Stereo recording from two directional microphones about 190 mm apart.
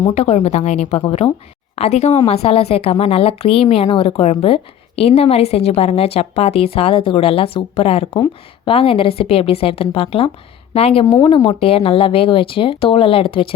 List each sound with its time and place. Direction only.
0.1 s a woman's voice: 35° left (ahead or behind)